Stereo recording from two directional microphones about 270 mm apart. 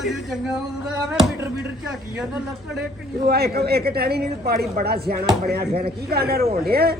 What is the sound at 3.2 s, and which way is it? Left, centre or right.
A man's voice, right.